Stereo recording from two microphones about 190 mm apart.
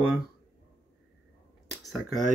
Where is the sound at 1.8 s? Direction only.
Centre (ahead or behind).